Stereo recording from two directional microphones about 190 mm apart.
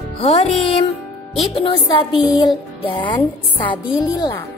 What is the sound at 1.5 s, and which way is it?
Music, 30° left (ahead or behind).